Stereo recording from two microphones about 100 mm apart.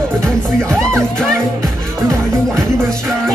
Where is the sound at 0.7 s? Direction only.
5° left (ahead or behind).